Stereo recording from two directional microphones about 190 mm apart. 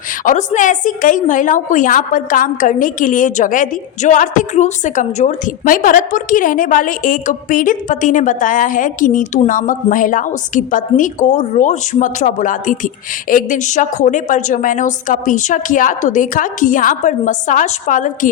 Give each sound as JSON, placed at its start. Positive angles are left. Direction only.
{"t": 0.3, "sound": "a woman's voice", "side_deg": 40}